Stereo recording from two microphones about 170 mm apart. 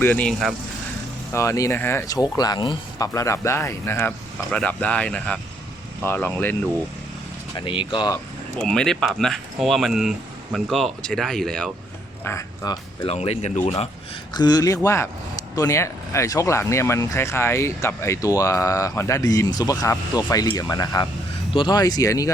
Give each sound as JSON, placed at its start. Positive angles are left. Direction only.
{"t": 0.0, "sound": "speech", "side_deg": 10}
{"t": 1.3, "sound": "speech", "side_deg": 15}
{"t": 7.6, "sound": "speech", "side_deg": 30}
{"t": 8.5, "sound": "speech", "side_deg": 5}
{"t": 12.2, "sound": "speech", "side_deg": 15}
{"t": 13.1, "sound": "speech", "side_deg": 40}
{"t": 14.3, "sound": "speech", "side_deg": 25}